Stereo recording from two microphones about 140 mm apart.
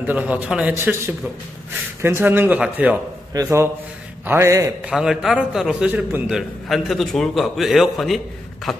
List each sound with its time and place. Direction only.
0.0 s a man's voice: 10° right (ahead or behind)
4.8 s a man's voice: 5° right (ahead or behind)